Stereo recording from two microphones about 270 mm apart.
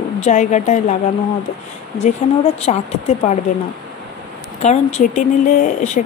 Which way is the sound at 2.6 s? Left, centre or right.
Left.